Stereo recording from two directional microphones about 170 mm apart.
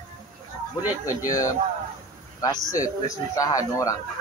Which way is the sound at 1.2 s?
20° left (ahead or behind).